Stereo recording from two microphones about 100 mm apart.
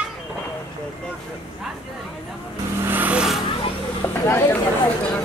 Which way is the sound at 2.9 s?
15° right (ahead or behind).